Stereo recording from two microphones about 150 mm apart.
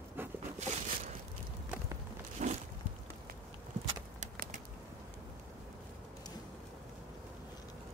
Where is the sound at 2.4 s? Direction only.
55° right (ahead or behind).